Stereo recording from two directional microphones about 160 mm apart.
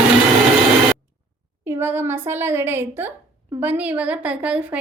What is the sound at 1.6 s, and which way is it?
A woman's voice, 15° right (ahead or behind).